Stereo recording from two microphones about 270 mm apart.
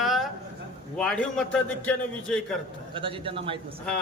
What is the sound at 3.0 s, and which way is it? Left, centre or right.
Speech, centre.